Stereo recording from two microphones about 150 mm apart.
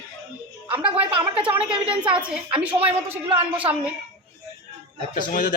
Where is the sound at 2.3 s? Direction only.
5° right (ahead or behind).